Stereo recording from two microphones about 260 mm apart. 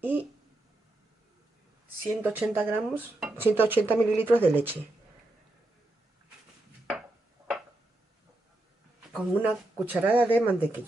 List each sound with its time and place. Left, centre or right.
0.0 s speech: centre
2.2 s speech: centre
6.9 s a sound: centre
9.1 s speech: centre